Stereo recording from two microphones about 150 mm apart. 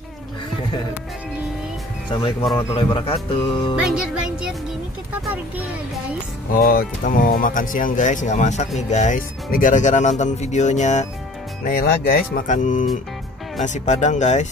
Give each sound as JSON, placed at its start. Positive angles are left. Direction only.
{"t": 2.5, "sound": "speech", "side_deg": 35}
{"t": 3.8, "sound": "music", "side_deg": -5}
{"t": 6.5, "sound": "speech", "side_deg": 80}
{"t": 11.6, "sound": "speech", "side_deg": 85}
{"t": 12.4, "sound": "speech", "side_deg": 55}